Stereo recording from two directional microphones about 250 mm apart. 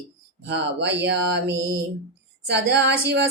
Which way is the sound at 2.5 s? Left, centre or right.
Right.